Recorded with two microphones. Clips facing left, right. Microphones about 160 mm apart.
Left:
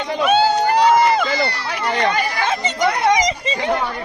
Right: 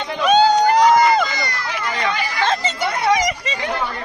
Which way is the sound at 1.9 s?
60° left (ahead or behind).